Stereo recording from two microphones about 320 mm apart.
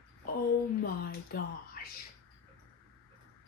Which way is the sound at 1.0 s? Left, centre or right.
Left.